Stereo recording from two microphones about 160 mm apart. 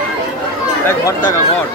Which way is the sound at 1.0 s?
20° left (ahead or behind).